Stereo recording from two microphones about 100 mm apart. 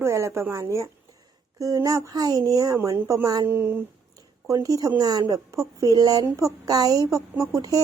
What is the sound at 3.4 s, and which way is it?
Speech, 20° right (ahead or behind).